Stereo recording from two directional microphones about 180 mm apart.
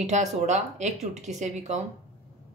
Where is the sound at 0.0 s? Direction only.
40° right (ahead or behind).